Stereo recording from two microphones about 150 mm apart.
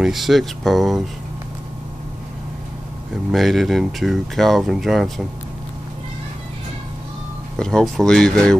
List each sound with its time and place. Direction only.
0.0 s speech: centre (ahead or behind)
3.3 s speech: centre (ahead or behind)
7.5 s speech: 5° left (ahead or behind)